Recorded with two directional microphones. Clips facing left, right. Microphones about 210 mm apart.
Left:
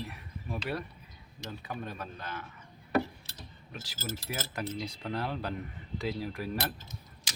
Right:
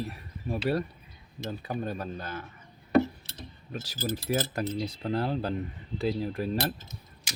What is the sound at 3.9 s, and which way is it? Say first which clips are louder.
Speech: right 9 dB; 15° right (ahead or behind).